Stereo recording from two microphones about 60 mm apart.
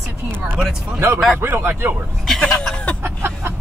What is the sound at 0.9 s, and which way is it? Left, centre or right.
Speech, right.